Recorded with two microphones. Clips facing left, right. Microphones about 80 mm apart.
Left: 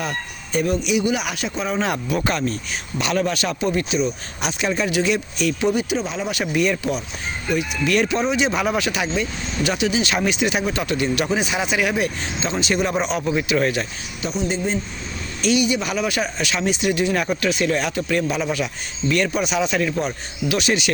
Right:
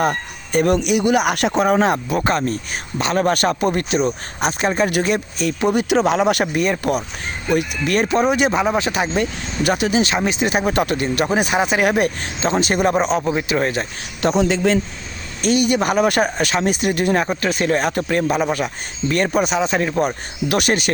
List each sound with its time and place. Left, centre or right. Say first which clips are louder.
0.0 s speech: right 7 dB; right
1.8 s speech: right 4 dB; right
4.4 s speech: right 4 dB; right
5.7 s speech: right 7 dB; right
6.4 s speech: right 2 dB; right
8.5 s speech: right 3 dB; right
9.2 s speech: right 3 dB; right
14.2 s speech: right 7 dB; right
15.4 s speech: right 3 dB; right
20.0 s speech: right 4 dB; right